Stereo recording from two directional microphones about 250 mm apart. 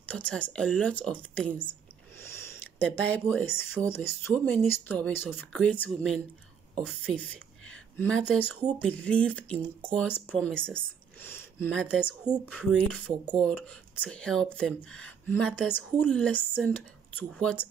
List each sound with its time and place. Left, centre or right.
0.1 s speech: centre
2.2 s a sound: centre
3.0 s speech: centre
8.5 s speech: centre
8.8 s speech: centre